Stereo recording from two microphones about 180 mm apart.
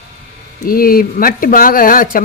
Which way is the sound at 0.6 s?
55° left (ahead or behind).